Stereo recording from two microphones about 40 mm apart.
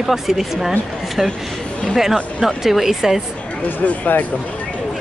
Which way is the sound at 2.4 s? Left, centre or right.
Centre.